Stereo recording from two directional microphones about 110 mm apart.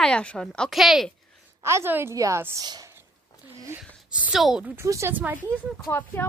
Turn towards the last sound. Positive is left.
turn(degrees=20)  # may be behind; listen again after turning